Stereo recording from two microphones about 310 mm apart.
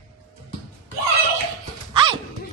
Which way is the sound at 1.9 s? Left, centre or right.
Centre.